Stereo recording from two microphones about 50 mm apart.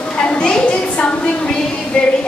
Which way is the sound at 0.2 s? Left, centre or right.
Left.